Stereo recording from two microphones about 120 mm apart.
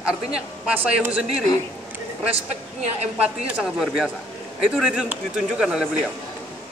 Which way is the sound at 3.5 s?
5° right (ahead or behind).